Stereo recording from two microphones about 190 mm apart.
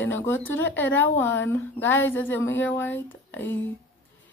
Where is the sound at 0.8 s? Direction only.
10° left (ahead or behind).